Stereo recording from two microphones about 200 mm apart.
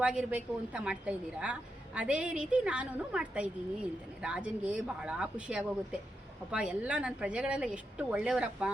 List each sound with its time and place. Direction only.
0.0 s a woman's voice: 5° right (ahead or behind)